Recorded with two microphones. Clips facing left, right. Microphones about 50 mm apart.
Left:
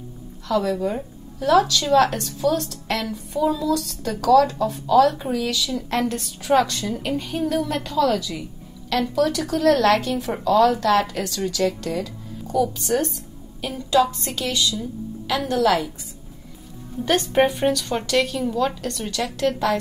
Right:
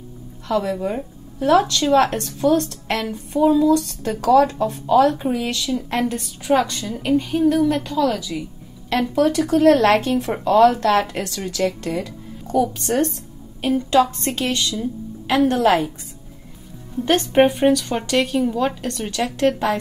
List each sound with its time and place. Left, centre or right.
0.5 s speech: right
1.4 s a woman's voice: right
5.9 s a woman's voice: centre
8.8 s a woman's voice: right
17.0 s speech: right
17.5 s speech: centre
18.9 s speech: right